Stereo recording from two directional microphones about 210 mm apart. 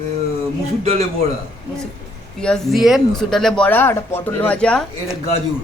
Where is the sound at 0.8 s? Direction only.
30° right (ahead or behind).